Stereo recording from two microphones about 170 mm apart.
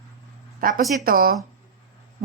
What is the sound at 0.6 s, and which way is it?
Speech, 55° right (ahead or behind).